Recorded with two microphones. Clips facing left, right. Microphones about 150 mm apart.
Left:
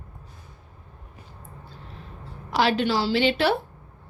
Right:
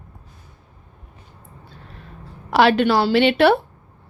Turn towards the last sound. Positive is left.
turn(degrees=-60)  # may be behind; listen again after turning